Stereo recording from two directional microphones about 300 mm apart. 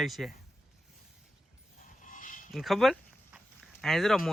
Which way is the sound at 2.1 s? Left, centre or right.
Left.